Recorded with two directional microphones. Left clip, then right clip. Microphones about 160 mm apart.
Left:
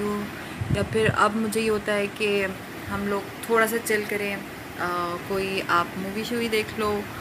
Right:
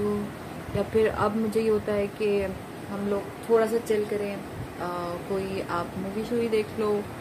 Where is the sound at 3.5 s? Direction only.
5° right (ahead or behind).